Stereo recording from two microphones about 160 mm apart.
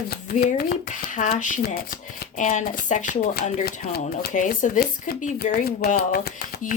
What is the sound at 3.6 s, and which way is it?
Speech, 70° left (ahead or behind).